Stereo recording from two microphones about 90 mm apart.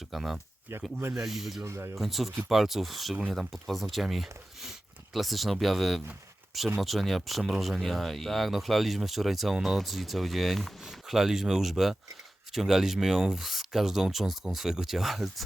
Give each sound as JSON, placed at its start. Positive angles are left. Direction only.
{"t": 0.1, "sound": "speech", "side_deg": -5}
{"t": 1.6, "sound": "speech", "side_deg": -30}
{"t": 2.0, "sound": "speech", "side_deg": 0}